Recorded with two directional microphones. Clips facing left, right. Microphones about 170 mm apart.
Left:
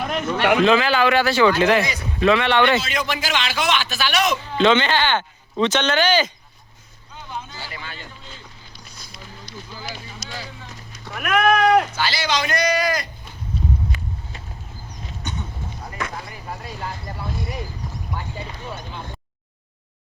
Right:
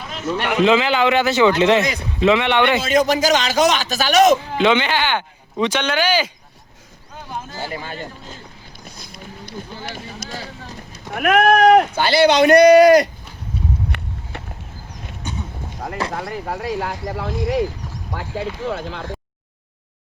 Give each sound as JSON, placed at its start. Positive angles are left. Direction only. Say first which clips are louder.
{"t": 0.0, "sound": "a man's voice", "louder": "left 3 dB", "side_deg": 60}
{"t": 0.6, "sound": "speech", "louder": "right 5 dB", "side_deg": -20}
{"t": 2.8, "sound": "a man's voice", "louder": "right 10 dB", "side_deg": -45}
{"t": 4.5, "sound": "speech", "louder": "even", "side_deg": -10}
{"t": 7.3, "sound": "a sound", "louder": "right 5 dB", "side_deg": -45}
{"t": 11.1, "sound": "speech", "louder": "right 4 dB", "side_deg": -50}
{"t": 13.9, "sound": "walk", "louder": "right 1 dB", "side_deg": -60}
{"t": 15.2, "sound": "a sound", "louder": "right 2 dB", "side_deg": -10}
{"t": 16.1, "sound": "speech", "louder": "right 8 dB", "side_deg": -70}